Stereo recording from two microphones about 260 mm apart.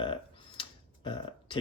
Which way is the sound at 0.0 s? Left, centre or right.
Centre.